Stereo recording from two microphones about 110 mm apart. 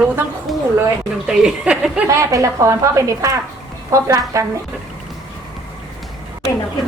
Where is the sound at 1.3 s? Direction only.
5° right (ahead or behind).